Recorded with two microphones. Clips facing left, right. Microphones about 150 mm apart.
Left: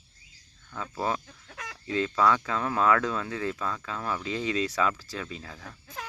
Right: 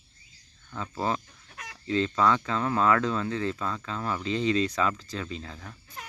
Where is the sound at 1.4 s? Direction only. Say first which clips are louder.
Left 3 dB; 90° left.